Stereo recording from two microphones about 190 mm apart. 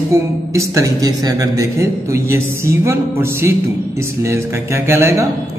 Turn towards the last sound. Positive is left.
turn(degrees=-15)  # may be behind; listen again after turning